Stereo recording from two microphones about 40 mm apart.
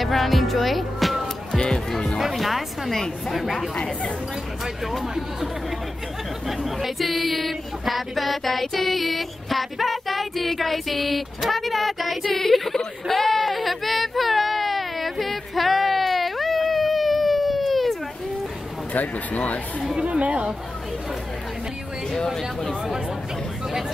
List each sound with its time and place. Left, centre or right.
0.0 s speech: centre
1.5 s music: centre
2.1 s music: centre
3.0 s speech: centre
4.9 s speech: centre
18.9 s speech: left
20.0 s speech: right
22.2 s speech: centre